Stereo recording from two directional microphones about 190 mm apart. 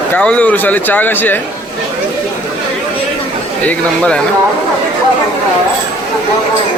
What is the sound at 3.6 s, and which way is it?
Speech, 5° left (ahead or behind).